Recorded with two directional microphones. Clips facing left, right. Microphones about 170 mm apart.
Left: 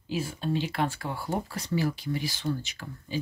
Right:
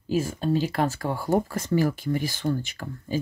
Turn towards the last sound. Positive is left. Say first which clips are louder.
# right 6 dB
turn(degrees=-50)  # may be behind; listen again after turning